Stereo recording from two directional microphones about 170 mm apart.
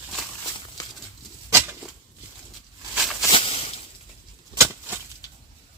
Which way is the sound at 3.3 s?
35° left (ahead or behind).